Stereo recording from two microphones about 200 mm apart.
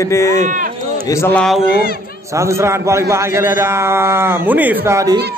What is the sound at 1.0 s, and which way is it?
Speech, 15° left (ahead or behind).